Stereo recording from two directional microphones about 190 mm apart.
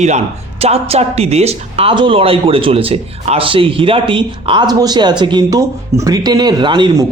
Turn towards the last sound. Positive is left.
turn(degrees=-25)  # may be behind; listen again after turning